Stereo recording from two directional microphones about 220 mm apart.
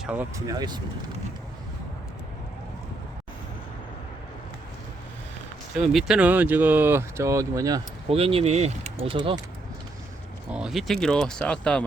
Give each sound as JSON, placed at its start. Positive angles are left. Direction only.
{"t": 0.0, "sound": "speech", "side_deg": -5}
{"t": 5.7, "sound": "speech", "side_deg": 0}
{"t": 8.0, "sound": "speech", "side_deg": -25}
{"t": 10.5, "sound": "speech", "side_deg": 0}